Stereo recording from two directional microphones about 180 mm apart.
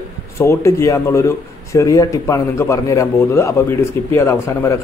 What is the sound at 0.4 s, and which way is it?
A man's voice, 15° left (ahead or behind).